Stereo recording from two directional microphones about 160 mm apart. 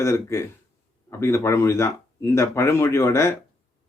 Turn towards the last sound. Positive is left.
turn(degrees=15)  # may be behind; listen again after turning